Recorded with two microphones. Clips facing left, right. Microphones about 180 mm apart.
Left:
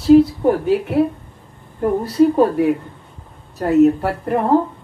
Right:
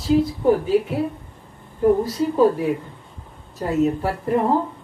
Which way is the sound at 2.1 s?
65° left (ahead or behind).